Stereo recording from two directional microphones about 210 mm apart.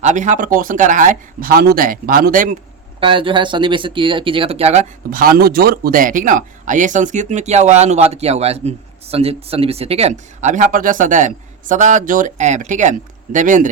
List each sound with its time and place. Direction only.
0.0 s speech: 35° right (ahead or behind)
3.0 s speech: 25° right (ahead or behind)